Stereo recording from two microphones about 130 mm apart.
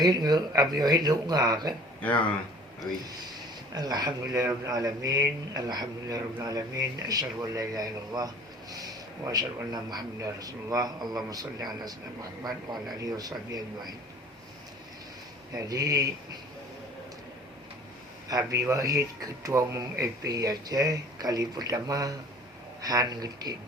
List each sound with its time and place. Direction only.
0.0 s speech: 30° right (ahead or behind)
3.8 s speech: 30° right (ahead or behind)
15.5 s speech: 30° right (ahead or behind)
18.3 s speech: 25° right (ahead or behind)